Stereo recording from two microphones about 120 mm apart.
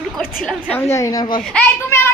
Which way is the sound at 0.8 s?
25° left (ahead or behind).